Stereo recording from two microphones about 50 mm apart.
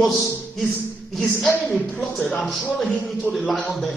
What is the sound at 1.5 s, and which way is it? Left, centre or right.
Speech, left.